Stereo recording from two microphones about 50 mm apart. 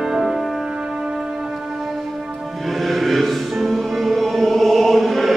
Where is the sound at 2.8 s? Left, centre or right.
Centre.